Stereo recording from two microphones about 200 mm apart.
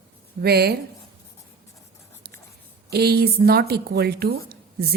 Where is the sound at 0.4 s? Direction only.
50° right (ahead or behind).